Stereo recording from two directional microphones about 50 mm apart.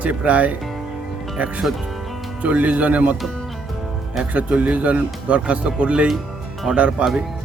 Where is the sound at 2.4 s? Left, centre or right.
Right.